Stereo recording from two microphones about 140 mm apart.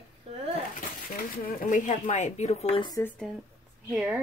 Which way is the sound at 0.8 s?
75° left (ahead or behind).